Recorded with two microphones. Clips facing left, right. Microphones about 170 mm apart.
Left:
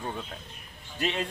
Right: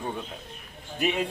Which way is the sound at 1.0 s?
15° right (ahead or behind).